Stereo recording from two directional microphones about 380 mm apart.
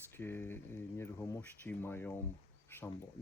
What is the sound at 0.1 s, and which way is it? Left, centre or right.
Speech, centre.